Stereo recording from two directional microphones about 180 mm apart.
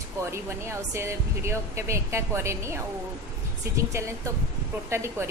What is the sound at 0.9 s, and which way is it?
Speech, 15° right (ahead or behind).